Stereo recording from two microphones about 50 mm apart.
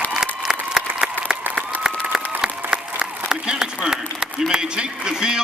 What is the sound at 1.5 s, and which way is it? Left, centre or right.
Applause, right.